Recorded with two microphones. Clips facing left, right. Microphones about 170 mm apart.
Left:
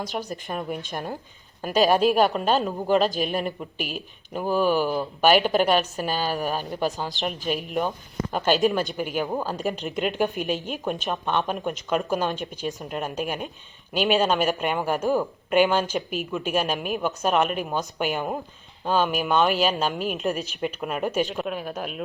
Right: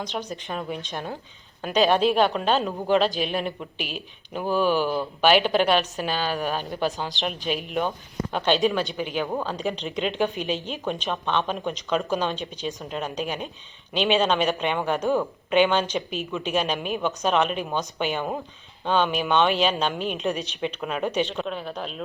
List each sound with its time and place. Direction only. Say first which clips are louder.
0.3 s speech: left 1 dB; centre (ahead or behind)
3.8 s speech: left 2 dB; 45° left (ahead or behind)
4.4 s speech: even; 10° left (ahead or behind)